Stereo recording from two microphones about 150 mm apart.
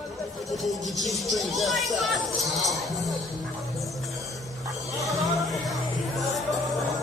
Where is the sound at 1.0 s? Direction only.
Centre (ahead or behind).